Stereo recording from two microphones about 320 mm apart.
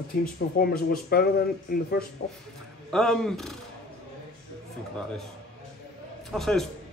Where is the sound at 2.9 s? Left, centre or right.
Centre.